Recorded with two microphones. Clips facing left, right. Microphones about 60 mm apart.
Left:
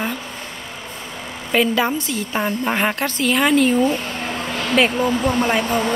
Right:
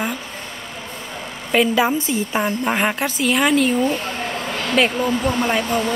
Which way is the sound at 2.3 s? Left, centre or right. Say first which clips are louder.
Left 1 dB; centre.